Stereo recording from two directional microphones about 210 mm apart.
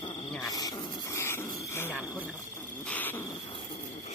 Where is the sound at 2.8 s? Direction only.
10° left (ahead or behind).